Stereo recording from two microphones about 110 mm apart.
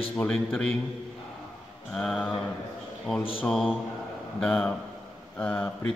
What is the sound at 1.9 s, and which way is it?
A man's voice, 5° left (ahead or behind).